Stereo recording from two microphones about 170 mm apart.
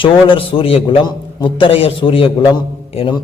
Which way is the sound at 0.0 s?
30° left (ahead or behind).